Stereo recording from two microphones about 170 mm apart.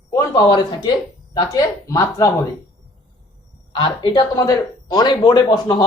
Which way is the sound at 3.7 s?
25° left (ahead or behind).